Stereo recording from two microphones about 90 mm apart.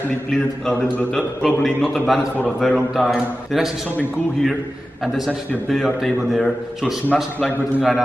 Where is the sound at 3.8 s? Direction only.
20° left (ahead or behind).